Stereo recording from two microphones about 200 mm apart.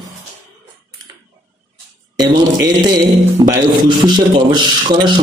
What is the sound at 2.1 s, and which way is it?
A man's voice, 20° right (ahead or behind).